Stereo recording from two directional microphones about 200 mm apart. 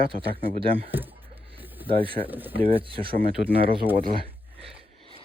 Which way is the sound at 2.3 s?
10° right (ahead or behind).